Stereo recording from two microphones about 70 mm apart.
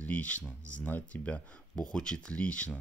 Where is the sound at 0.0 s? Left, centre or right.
Left.